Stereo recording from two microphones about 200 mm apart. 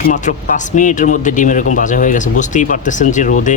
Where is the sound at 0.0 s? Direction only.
40° left (ahead or behind).